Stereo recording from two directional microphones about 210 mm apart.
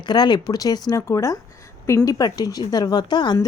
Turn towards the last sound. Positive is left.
turn(degrees=20)  # may be behind; listen again after turning